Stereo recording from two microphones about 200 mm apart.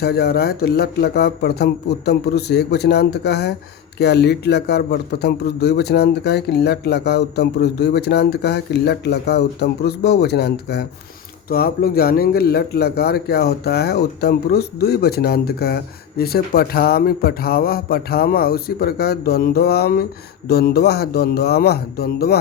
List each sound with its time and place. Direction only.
0.0 s a man's voice: 55° left (ahead or behind)